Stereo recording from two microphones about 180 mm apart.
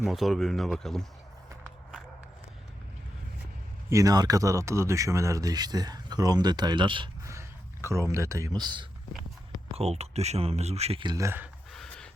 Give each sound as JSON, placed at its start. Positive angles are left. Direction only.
{"t": 0.0, "sound": "speech", "side_deg": 0}
{"t": 3.8, "sound": "speech", "side_deg": -20}
{"t": 7.3, "sound": "speech", "side_deg": -15}
{"t": 9.7, "sound": "speech", "side_deg": -35}
{"t": 11.7, "sound": "pant", "side_deg": 5}